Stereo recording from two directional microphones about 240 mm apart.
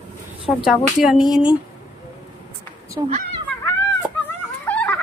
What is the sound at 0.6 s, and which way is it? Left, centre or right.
A child's voice, centre.